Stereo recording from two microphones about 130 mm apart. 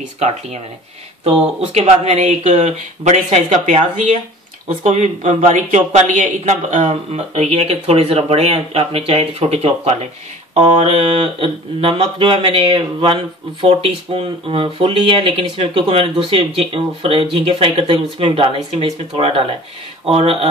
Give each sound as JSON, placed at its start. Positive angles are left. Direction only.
{"t": 0.2, "sound": "speech", "side_deg": -55}
{"t": 1.6, "sound": "speech", "side_deg": -55}